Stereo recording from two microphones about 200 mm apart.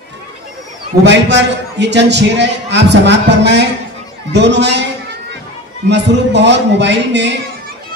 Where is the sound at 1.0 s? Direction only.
60° right (ahead or behind).